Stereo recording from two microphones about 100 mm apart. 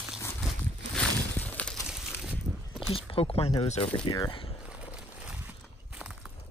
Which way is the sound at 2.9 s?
70° left (ahead or behind).